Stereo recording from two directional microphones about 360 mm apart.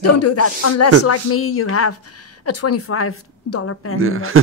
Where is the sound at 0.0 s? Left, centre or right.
Left.